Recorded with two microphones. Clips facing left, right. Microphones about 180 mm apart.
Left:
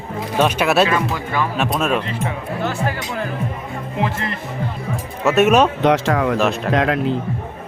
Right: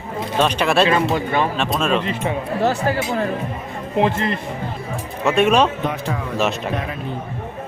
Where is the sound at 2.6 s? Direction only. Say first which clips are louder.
Right 4 dB; 35° right (ahead or behind).